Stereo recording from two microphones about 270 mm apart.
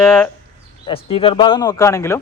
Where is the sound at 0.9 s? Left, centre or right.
Left.